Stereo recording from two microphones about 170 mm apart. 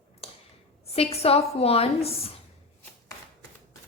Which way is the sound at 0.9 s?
35° left (ahead or behind).